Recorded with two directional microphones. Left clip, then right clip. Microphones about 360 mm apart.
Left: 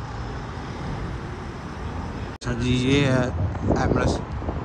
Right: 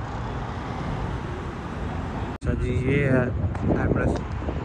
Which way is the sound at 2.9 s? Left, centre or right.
Centre.